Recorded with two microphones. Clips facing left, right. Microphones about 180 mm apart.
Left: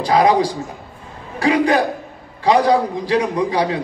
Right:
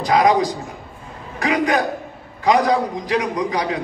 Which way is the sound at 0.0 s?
30° left (ahead or behind).